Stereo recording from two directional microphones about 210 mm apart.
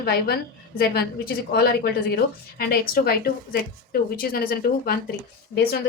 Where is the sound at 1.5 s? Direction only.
50° left (ahead or behind).